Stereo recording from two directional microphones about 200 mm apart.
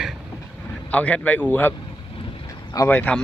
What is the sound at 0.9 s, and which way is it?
Speech, 5° left (ahead or behind).